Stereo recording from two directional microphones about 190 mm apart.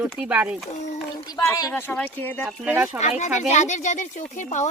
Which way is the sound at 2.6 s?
10° right (ahead or behind).